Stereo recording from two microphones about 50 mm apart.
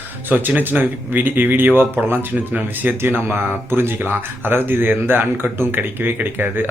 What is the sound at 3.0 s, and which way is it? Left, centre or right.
Speech, right.